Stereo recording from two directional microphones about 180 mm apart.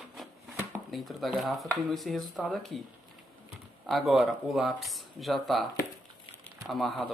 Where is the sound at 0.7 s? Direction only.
Centre (ahead or behind).